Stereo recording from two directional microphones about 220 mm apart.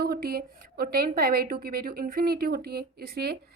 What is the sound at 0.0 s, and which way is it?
A woman's voice, 45° right (ahead or behind).